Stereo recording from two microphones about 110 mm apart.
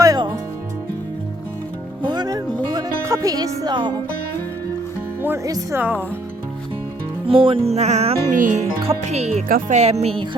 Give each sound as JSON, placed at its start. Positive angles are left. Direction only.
{"t": 0.0, "sound": "music", "side_deg": -40}
{"t": 2.0, "sound": "music", "side_deg": -40}
{"t": 5.7, "sound": "speech", "side_deg": -15}
{"t": 7.3, "sound": "music", "side_deg": -55}